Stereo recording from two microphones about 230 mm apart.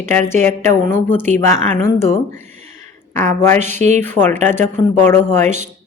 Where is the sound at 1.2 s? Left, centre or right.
Right.